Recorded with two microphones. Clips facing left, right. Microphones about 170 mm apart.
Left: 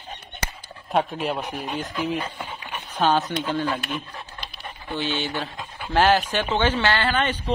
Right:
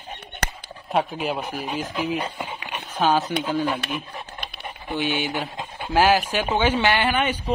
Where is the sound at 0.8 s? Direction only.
Centre (ahead or behind).